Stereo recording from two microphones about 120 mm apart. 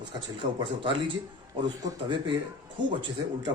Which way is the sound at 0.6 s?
45° right (ahead or behind).